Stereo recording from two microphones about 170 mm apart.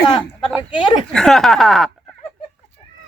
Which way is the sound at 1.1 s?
5° left (ahead or behind).